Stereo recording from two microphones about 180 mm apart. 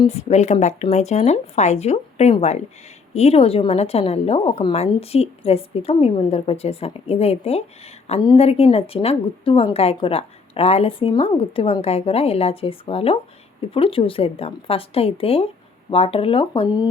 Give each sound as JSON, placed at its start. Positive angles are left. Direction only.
{"t": 0.0, "sound": "speech", "side_deg": 35}